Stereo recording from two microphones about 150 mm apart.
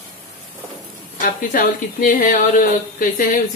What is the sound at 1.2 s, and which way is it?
A woman's voice, 65° left (ahead or behind).